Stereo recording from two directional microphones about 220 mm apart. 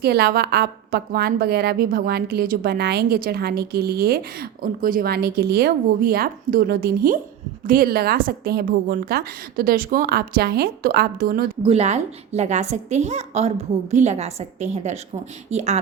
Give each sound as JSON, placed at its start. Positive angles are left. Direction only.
{"t": 0.0, "sound": "a woman's voice", "side_deg": -45}
{"t": 11.6, "sound": "a woman's voice", "side_deg": -25}